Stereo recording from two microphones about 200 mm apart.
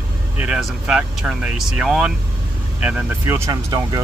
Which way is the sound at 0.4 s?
5° right (ahead or behind).